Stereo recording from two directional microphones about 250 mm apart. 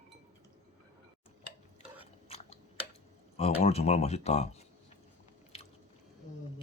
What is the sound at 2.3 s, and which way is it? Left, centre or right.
Chewing, left.